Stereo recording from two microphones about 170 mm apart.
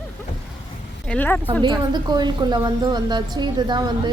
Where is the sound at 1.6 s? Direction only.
25° right (ahead or behind).